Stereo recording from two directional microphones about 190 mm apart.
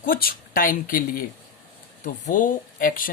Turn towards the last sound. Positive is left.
turn(degrees=45)  # may be behind; listen again after turning